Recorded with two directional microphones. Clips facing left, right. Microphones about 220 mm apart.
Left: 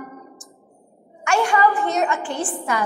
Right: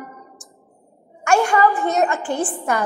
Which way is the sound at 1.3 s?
45° right (ahead or behind).